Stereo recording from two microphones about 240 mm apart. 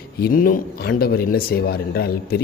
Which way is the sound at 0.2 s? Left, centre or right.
Left.